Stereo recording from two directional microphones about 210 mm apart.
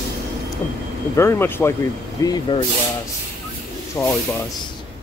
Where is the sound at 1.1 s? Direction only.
15° left (ahead or behind).